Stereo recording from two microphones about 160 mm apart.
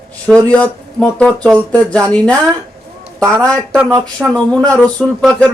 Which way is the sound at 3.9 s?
20° right (ahead or behind).